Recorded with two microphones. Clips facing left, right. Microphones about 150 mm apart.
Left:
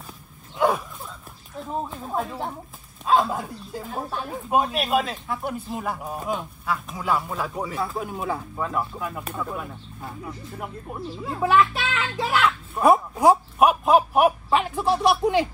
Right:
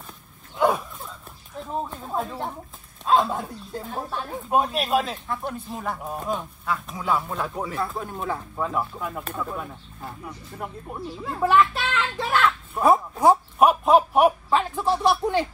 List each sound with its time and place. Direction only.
0.6 s dog: centre (ahead or behind)
3.1 s speech: centre (ahead or behind)
12.9 s a sound: 10° left (ahead or behind)